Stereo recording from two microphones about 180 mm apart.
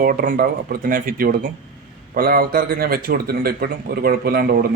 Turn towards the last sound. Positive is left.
turn(degrees=-60)  # may be behind; listen again after turning